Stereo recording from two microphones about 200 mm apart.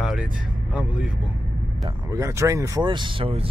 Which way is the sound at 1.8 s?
15° right (ahead or behind).